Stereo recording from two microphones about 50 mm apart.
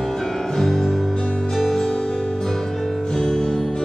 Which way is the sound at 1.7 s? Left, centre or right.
Centre.